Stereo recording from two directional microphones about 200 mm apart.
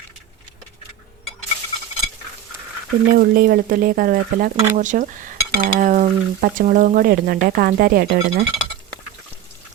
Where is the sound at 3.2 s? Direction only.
50° right (ahead or behind).